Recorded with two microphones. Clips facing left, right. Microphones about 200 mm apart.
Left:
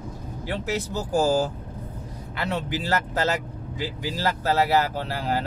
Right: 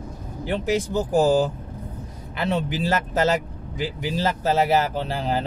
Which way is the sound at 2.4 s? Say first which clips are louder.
Right 4 dB; 20° right (ahead or behind).